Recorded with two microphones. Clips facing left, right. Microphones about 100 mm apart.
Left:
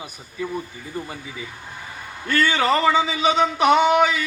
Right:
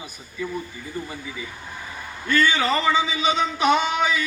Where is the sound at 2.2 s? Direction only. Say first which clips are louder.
Left 1 dB; 65° left (ahead or behind).